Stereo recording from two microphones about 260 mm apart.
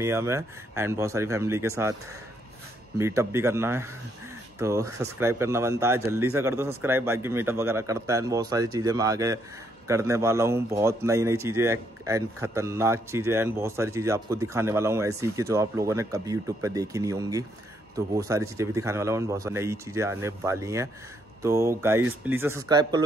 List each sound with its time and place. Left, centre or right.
0.0 s a man's voice: centre
3.0 s a man's voice: centre